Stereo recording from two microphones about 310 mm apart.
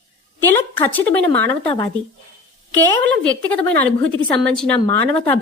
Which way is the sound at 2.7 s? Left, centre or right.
Centre.